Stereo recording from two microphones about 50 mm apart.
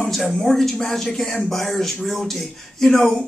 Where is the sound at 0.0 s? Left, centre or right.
Centre.